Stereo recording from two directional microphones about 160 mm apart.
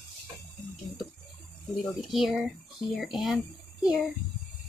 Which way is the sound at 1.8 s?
Centre (ahead or behind).